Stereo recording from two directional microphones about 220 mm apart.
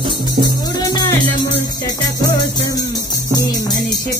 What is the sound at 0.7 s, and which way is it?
Music, 15° left (ahead or behind).